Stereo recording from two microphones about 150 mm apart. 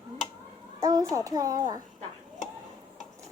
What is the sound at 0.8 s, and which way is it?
A child's voice, 25° right (ahead or behind).